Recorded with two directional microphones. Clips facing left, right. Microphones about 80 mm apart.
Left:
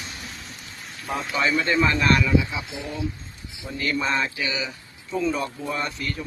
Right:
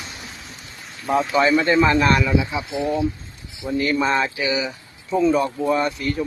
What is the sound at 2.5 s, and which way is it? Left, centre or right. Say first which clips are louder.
Speech: right 8 dB; right.